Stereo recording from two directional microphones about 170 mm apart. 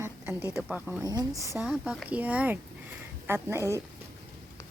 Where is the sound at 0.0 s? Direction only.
10° right (ahead or behind).